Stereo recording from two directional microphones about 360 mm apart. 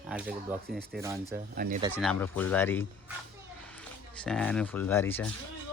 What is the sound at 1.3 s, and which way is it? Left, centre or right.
Speech, right.